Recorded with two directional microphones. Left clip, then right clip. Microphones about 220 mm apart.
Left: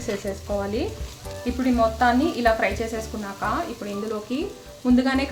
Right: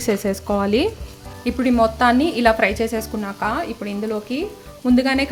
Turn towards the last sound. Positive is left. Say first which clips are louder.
# right 4 dB
turn(degrees=-35)  # may be behind; listen again after turning